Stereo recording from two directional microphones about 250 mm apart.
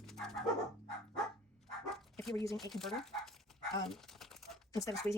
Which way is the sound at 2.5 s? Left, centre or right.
Centre.